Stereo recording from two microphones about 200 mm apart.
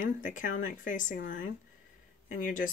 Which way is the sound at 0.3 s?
40° left (ahead or behind).